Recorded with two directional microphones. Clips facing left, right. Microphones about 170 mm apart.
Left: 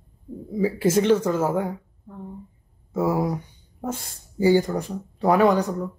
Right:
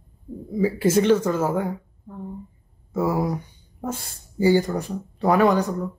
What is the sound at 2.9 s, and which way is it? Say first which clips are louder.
Speech: even; 15° left (ahead or behind).